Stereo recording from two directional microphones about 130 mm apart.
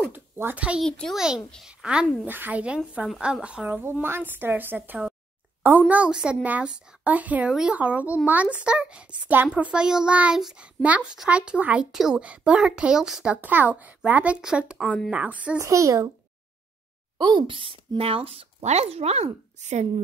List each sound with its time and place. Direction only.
0.0 s a woman's voice: 15° right (ahead or behind)
0.8 s a child's voice: 5° left (ahead or behind)
14.8 s speech: 5° left (ahead or behind)
15.0 s speech: 10° right (ahead or behind)
15.6 s a child's voice: 25° right (ahead or behind)
17.2 s speech: 35° right (ahead or behind); by 19.9 s 60° right (ahead or behind)